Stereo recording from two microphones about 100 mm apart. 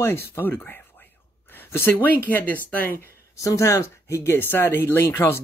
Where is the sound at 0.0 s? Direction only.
25° left (ahead or behind).